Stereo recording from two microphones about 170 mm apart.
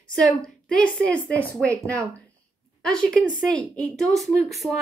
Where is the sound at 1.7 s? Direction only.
15° right (ahead or behind).